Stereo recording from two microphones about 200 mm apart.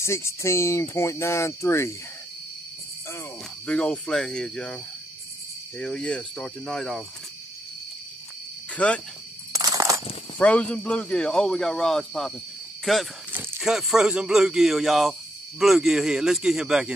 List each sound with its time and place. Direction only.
0.0 s speech: 15° left (ahead or behind)
3.6 s speech: 5° left (ahead or behind)
5.8 s speech: 5° left (ahead or behind)
8.7 s speech: 5° left (ahead or behind)
9.5 s a sound: 15° right (ahead or behind)
10.4 s speech: 5° left (ahead or behind)